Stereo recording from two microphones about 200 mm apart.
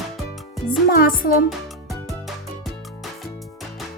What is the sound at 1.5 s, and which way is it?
Music, centre (ahead or behind).